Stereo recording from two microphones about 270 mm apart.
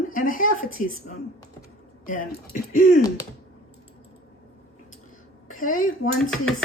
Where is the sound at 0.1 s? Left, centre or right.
Left.